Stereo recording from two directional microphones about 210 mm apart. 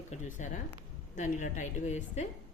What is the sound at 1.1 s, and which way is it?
A woman's voice, 35° left (ahead or behind).